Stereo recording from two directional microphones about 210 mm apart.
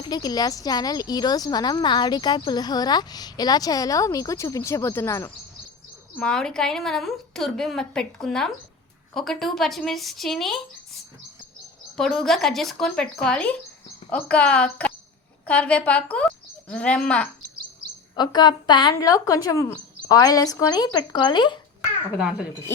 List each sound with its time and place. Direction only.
0.0 s a woman's voice: 20° left (ahead or behind); by 10.6 s centre (ahead or behind)
11.9 s a woman's voice: centre (ahead or behind)
18.2 s speech: 20° left (ahead or behind)
22.2 s a woman's voice: 5° right (ahead or behind)